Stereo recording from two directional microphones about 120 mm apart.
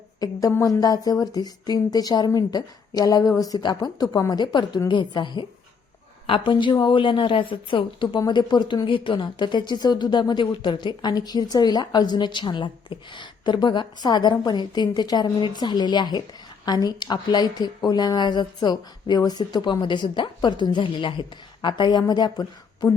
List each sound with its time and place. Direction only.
0.2 s a woman's voice: 30° left (ahead or behind)